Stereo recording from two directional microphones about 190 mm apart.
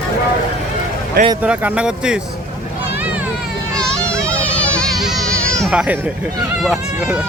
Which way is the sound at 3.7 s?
5° left (ahead or behind).